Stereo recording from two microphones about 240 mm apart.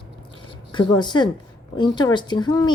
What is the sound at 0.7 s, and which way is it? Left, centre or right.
A woman's voice, centre.